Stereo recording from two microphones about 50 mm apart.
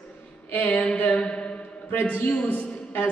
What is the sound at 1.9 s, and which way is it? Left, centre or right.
A man's voice, left.